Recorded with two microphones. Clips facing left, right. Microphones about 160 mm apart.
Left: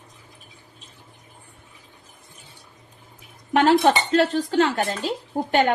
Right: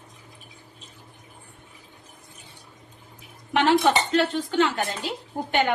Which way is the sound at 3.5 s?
45° left (ahead or behind).